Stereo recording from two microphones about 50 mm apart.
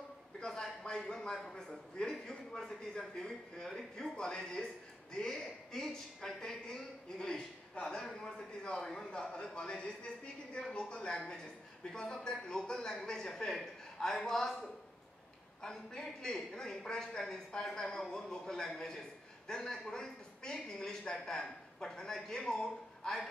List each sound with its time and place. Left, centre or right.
0.4 s a man's voice: centre